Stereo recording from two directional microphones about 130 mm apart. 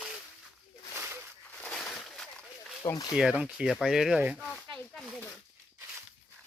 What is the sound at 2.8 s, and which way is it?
Speech, 25° left (ahead or behind).